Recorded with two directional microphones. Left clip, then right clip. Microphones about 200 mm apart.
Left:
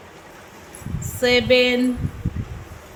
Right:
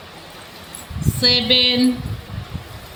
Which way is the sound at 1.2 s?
45° left (ahead or behind).